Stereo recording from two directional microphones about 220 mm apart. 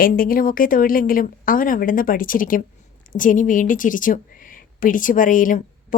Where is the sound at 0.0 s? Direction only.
40° left (ahead or behind).